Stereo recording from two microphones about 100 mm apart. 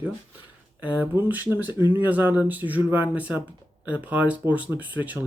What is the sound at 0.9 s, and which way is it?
Speech, 20° right (ahead or behind).